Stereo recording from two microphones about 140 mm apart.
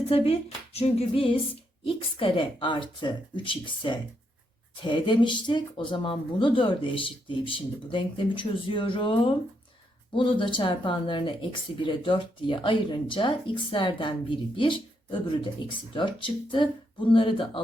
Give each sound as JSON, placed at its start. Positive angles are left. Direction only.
{"t": 0.1, "sound": "speech", "side_deg": 45}